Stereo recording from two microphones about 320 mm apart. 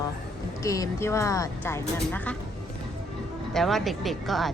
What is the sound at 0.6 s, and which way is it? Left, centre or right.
A woman's voice, centre.